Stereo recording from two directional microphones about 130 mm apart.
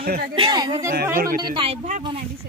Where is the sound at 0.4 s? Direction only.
35° right (ahead or behind).